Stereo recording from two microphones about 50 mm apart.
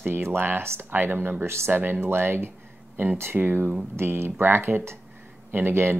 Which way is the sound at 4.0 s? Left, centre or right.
Right.